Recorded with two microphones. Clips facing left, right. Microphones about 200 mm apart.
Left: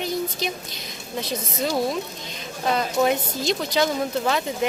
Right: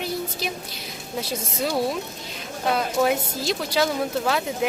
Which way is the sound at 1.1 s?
10° right (ahead or behind).